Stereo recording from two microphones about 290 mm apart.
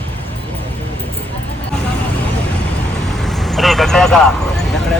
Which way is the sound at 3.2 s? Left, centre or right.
Centre.